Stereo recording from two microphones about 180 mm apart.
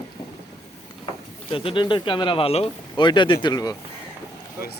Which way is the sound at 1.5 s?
30° left (ahead or behind).